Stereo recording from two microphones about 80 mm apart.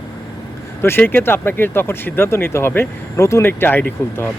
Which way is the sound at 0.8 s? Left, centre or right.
Left.